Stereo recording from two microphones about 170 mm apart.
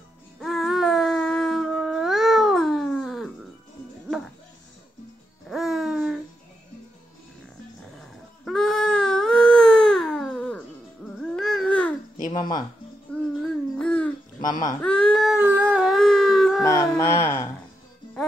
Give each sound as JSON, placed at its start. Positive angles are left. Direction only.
{"t": 0.4, "sound": "a sound", "side_deg": 0}
{"t": 5.5, "sound": "music", "side_deg": 0}
{"t": 8.0, "sound": "baby cry", "side_deg": 0}
{"t": 11.1, "sound": "music", "side_deg": 0}
{"t": 12.3, "sound": "music", "side_deg": 25}
{"t": 13.4, "sound": "music", "side_deg": 5}
{"t": 14.8, "sound": "baby cry", "side_deg": 5}
{"t": 15.4, "sound": "a sound", "side_deg": -10}
{"t": 16.6, "sound": "speech", "side_deg": 20}